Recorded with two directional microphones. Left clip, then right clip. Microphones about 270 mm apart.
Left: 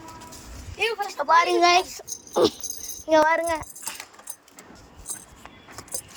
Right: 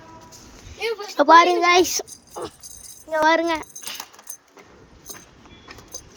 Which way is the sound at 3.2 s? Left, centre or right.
Centre.